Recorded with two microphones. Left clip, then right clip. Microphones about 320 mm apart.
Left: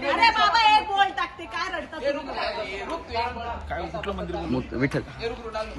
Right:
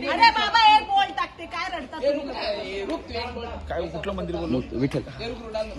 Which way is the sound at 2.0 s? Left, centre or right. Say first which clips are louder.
Right 3 dB; centre.